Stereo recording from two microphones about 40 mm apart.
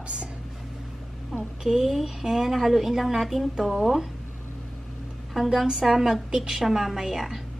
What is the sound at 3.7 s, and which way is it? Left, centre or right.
Speech, centre.